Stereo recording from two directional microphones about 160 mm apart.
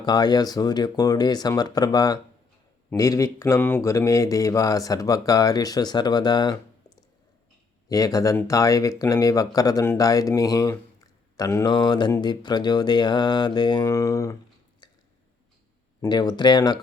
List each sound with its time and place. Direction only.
0.0 s speech: 25° left (ahead or behind)
16.0 s speech: 25° left (ahead or behind)